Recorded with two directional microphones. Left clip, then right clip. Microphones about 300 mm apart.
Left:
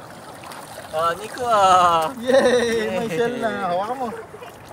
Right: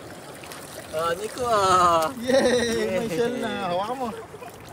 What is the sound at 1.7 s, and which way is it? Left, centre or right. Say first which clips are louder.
Speech: left 3 dB; left.